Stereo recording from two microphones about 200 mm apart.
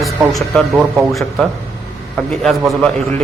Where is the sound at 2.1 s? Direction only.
Centre (ahead or behind).